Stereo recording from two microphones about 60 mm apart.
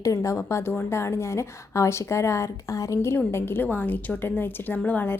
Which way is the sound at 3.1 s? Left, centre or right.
Left.